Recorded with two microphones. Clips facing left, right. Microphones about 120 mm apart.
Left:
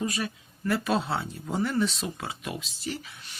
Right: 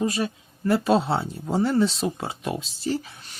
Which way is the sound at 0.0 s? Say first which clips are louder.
Right 6 dB; 30° right (ahead or behind).